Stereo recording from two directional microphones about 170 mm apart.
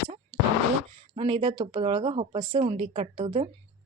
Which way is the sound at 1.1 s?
30° right (ahead or behind).